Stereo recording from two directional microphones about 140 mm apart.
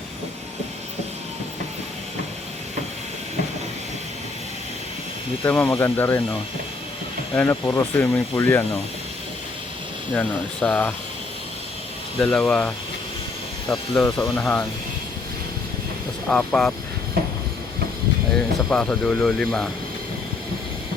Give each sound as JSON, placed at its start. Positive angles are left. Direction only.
{"t": 5.4, "sound": "speech", "side_deg": 15}
{"t": 7.3, "sound": "speech", "side_deg": 15}
{"t": 10.2, "sound": "speech", "side_deg": 10}
{"t": 12.2, "sound": "speech", "side_deg": 5}
{"t": 16.3, "sound": "speech", "side_deg": 10}
{"t": 18.3, "sound": "speech", "side_deg": 5}